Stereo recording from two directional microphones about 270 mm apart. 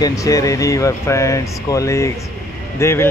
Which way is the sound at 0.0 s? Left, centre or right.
Centre.